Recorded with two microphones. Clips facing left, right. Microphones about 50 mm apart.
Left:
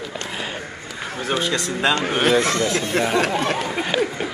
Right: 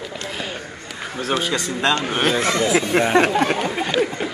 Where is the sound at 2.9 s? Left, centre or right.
Right.